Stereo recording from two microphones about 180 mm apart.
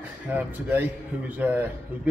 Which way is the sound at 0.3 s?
10° right (ahead or behind).